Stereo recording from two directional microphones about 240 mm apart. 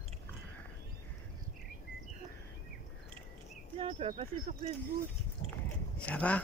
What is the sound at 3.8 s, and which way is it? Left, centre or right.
Speech, right.